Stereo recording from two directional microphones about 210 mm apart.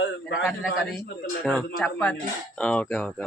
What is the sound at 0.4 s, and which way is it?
Speech, centre (ahead or behind).